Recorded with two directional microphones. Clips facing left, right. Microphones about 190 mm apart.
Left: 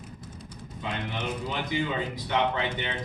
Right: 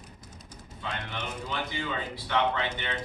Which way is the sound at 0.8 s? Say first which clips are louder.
Left 4 dB; 20° left (ahead or behind).